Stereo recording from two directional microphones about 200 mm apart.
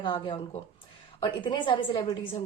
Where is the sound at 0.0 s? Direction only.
20° left (ahead or behind).